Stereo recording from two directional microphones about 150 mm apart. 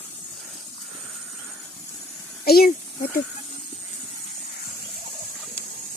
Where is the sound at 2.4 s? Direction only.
90° left.